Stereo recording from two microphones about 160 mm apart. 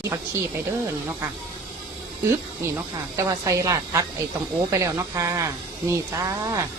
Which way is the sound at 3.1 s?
20° right (ahead or behind).